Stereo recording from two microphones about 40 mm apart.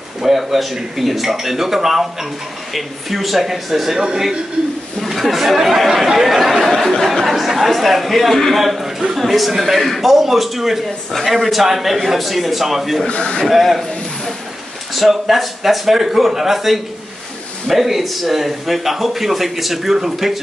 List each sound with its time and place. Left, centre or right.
0.2 s a man's voice: centre
5.0 s speech: centre
6.2 s chatter: centre
7.2 s a man's voice: centre
13.0 s speech: left
13.5 s a man's voice: centre
15.0 s a man's voice: centre